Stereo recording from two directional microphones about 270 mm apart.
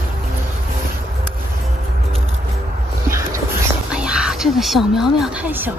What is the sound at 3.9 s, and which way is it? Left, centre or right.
Speech, centre.